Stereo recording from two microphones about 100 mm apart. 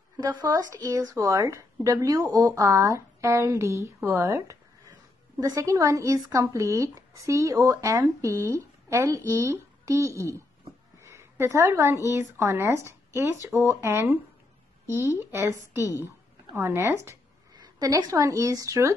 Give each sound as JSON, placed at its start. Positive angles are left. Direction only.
{"t": 0.5, "sound": "speech", "side_deg": -40}
{"t": 11.0, "sound": "a sound", "side_deg": -30}
{"t": 12.1, "sound": "speech", "side_deg": -30}
{"t": 17.6, "sound": "a woman's voice", "side_deg": -40}